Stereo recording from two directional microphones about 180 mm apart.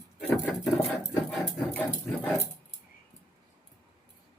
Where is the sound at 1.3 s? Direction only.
5° left (ahead or behind).